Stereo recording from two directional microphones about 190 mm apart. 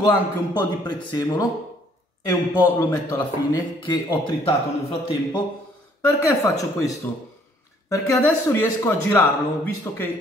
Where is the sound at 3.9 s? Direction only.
25° left (ahead or behind).